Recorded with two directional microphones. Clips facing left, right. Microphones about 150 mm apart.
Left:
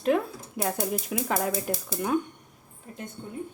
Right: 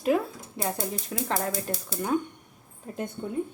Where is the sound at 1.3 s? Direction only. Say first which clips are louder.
Left 1 dB; 10° left (ahead or behind).